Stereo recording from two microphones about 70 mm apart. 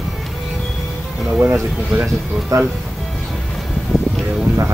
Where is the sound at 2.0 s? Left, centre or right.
Right.